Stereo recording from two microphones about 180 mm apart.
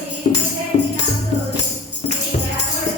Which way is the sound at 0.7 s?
45° left (ahead or behind).